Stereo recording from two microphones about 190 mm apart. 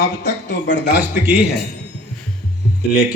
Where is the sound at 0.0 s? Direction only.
60° left (ahead or behind).